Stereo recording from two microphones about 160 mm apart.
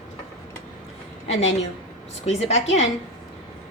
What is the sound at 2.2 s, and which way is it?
Speech, 45° left (ahead or behind).